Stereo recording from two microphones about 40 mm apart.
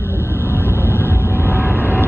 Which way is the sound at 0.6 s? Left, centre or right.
Right.